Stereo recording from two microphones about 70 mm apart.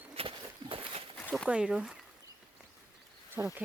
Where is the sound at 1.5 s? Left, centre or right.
Centre.